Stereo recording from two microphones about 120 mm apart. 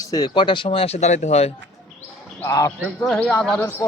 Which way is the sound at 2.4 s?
30° left (ahead or behind).